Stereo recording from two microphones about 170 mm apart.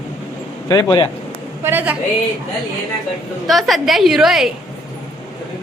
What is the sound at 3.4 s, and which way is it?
A man's voice, centre (ahead or behind).